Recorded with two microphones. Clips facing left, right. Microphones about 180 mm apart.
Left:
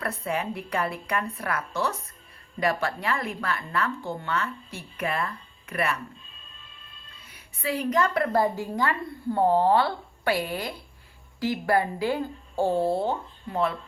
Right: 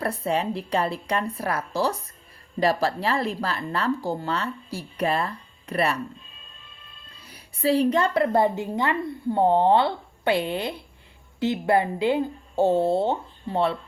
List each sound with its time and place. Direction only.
0.0 s speech: 30° right (ahead or behind)
7.3 s a woman's voice: 35° right (ahead or behind)